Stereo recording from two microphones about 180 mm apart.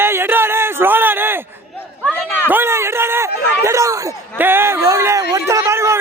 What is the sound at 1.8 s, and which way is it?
Chatter, 10° left (ahead or behind).